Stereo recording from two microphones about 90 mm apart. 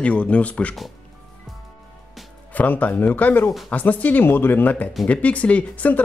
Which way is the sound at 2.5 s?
15° left (ahead or behind).